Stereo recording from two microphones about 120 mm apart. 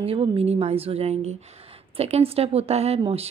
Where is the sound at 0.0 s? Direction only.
55° right (ahead or behind).